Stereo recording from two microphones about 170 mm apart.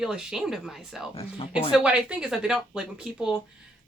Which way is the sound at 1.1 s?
35° left (ahead or behind).